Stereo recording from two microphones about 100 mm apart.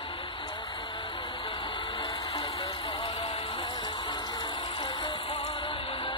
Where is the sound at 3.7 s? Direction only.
50° left (ahead or behind).